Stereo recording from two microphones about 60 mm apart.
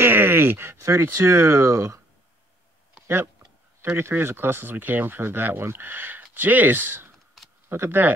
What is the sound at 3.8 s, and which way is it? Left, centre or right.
Speech, right.